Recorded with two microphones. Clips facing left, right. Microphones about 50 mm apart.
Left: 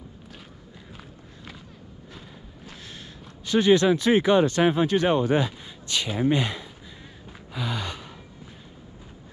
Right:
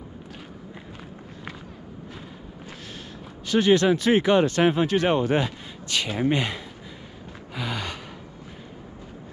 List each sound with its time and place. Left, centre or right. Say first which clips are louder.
3.4 s speech: even; right
7.5 s gasp: even; right